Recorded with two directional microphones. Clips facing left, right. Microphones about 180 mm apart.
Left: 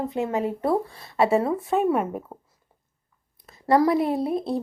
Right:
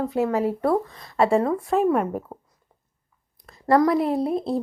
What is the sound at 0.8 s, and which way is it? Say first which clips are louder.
Speech: even; 30° left (ahead or behind).